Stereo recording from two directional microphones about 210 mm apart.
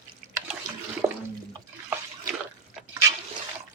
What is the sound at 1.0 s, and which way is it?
Water, 15° right (ahead or behind).